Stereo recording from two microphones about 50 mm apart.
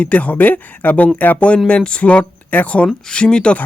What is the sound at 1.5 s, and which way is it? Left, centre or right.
Speech, centre.